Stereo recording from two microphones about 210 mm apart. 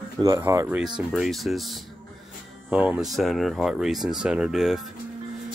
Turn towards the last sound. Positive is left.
turn(degrees=0)  # may be behind; listen again after turning